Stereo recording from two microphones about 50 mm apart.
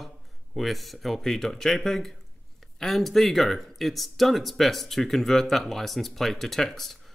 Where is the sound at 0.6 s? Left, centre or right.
Centre.